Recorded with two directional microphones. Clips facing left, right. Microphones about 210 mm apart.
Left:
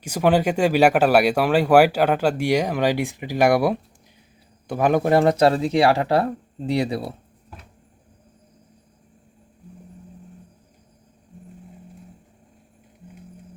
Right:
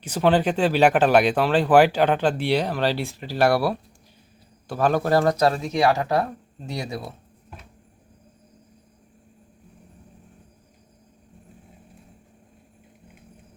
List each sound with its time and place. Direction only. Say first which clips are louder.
0.0 s speech: left 1 dB; 10° left (ahead or behind); by 7.1 s 30° left (ahead or behind)